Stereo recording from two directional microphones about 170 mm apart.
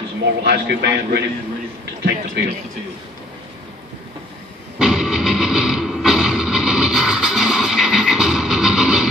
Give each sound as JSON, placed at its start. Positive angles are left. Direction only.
{"t": 0.4, "sound": "a man's voice", "side_deg": -75}
{"t": 4.7, "sound": "music", "side_deg": -5}